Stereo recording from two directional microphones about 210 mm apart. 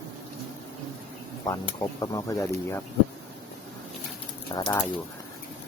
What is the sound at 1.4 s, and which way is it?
Speech, 20° left (ahead or behind).